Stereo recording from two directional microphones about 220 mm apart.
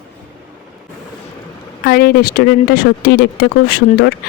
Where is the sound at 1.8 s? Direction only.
45° left (ahead or behind).